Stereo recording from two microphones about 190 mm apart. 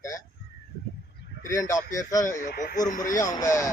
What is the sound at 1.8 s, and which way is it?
A man's voice, 40° left (ahead or behind).